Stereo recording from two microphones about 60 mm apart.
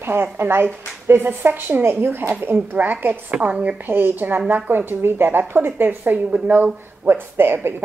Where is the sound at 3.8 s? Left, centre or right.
Right.